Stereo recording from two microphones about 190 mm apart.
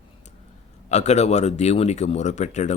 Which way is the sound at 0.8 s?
35° left (ahead or behind).